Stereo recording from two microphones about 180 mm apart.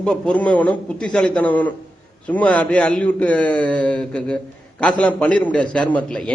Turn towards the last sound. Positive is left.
turn(degrees=5)  # may be behind; listen again after turning